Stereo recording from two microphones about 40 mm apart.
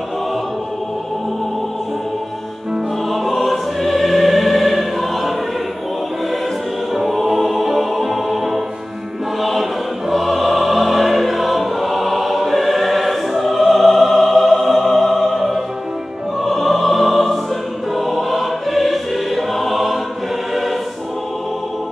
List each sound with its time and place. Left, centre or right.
3.1 s music: centre
6.9 s music: centre
17.9 s choir: centre